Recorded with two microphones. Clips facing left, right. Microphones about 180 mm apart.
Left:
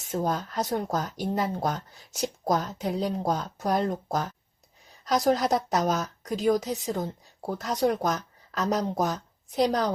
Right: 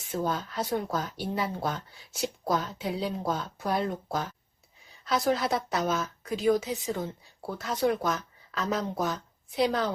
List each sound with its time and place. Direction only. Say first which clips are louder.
0.0 s a woman's voice: left 2 dB; 45° left (ahead or behind)